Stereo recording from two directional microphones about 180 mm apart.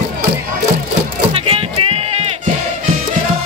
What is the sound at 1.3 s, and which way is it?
Music, 30° right (ahead or behind).